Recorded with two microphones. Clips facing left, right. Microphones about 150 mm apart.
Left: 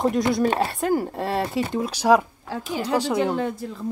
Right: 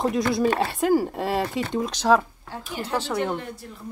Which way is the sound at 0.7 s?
Centre (ahead or behind).